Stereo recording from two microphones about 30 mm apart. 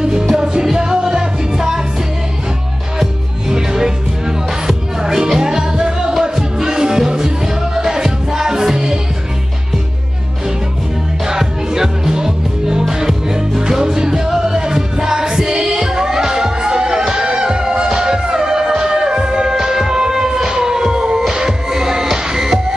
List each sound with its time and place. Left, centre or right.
0.0 s music: right
3.0 s music: centre
11.2 s music: centre